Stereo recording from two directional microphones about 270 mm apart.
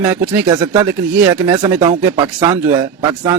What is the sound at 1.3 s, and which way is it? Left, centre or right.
A man's voice, centre.